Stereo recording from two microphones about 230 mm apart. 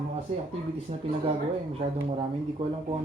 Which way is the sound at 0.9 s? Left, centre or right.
Right.